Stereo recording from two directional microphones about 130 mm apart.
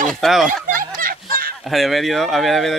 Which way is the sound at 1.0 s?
90° right.